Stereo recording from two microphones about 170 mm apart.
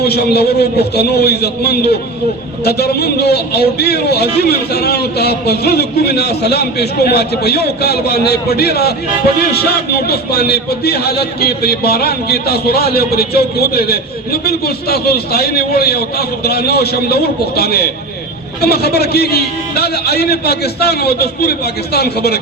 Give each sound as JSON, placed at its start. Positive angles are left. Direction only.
{"t": 0.0, "sound": "a man's voice", "side_deg": 70}